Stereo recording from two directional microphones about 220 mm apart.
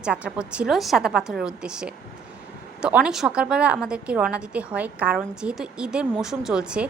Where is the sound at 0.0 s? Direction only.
5° right (ahead or behind).